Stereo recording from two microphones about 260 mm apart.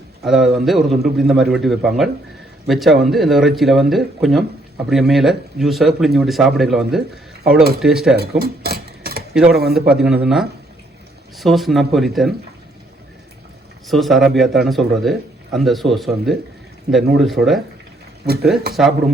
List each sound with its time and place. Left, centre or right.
0.3 s speech: centre
8.1 s a sound: right
9.3 s speech: centre
13.8 s speech: centre
18.7 s speech: centre